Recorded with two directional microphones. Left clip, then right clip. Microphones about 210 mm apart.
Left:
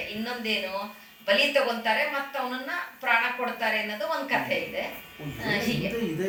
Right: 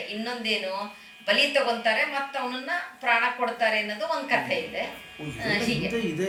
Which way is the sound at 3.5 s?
50° right (ahead or behind).